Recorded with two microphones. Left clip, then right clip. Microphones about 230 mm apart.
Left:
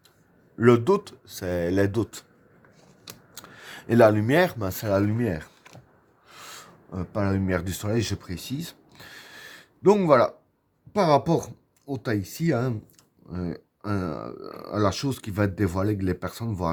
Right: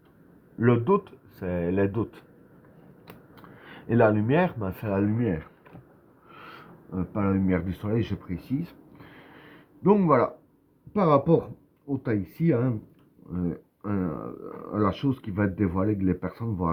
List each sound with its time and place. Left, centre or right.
0.6 s speech: left
3.3 s speech: left
6.2 s a sound: left
10.9 s speech: left